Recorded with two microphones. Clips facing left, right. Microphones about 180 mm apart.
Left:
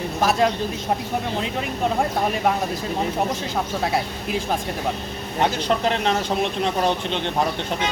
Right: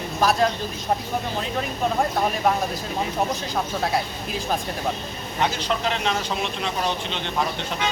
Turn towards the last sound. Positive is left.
turn(degrees=50)  # may be behind; listen again after turning